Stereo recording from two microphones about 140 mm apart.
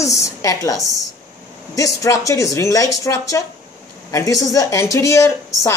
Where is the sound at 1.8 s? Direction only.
25° left (ahead or behind).